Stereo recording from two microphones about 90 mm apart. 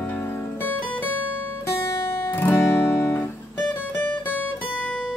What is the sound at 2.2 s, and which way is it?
Guitar, 25° left (ahead or behind).